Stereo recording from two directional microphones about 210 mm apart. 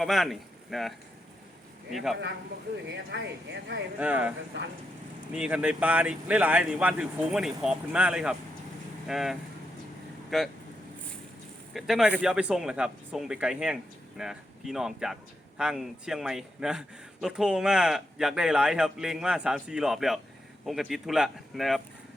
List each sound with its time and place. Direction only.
0.0 s speech: centre (ahead or behind)
2.8 s speech: 55° right (ahead or behind)
4.0 s speech: 5° right (ahead or behind)
11.7 s speech: centre (ahead or behind)